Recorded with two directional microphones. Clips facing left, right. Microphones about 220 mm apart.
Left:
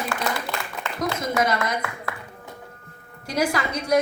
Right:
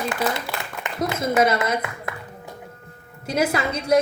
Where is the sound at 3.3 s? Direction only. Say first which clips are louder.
Right 2 dB; 25° right (ahead or behind).